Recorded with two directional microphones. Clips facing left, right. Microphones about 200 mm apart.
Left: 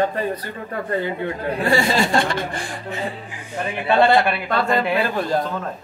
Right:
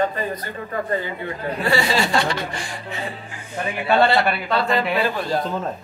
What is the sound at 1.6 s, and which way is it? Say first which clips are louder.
Speech: left 2 dB; 50° left (ahead or behind).